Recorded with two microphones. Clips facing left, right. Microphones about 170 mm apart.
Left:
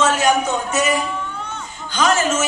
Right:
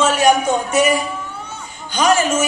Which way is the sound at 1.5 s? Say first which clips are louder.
Left 1 dB; 10° right (ahead or behind).